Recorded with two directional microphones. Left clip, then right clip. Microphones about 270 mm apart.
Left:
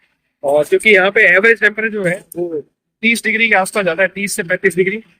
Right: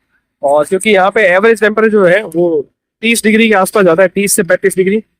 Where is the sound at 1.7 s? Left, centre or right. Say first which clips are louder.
Right 10 dB; right.